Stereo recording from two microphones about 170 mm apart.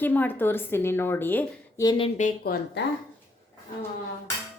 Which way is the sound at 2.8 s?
90° left.